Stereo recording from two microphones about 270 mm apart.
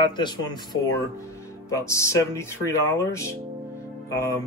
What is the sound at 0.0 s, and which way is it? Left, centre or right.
Speech, centre.